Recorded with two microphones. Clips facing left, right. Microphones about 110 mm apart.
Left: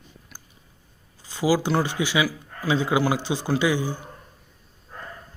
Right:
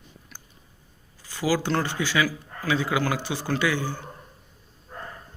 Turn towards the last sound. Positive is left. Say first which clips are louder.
# left 3 dB
turn(degrees=15)  # may be behind; listen again after turning